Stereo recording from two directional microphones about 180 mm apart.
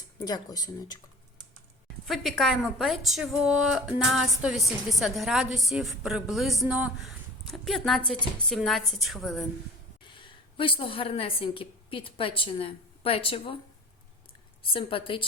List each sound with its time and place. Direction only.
0.3 s speech: 20° left (ahead or behind)
2.0 s a woman's voice: centre (ahead or behind)
10.0 s a woman's voice: 25° left (ahead or behind)
14.6 s speech: 30° left (ahead or behind)